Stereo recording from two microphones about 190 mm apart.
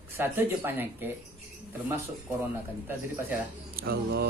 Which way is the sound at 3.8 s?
55° right (ahead or behind).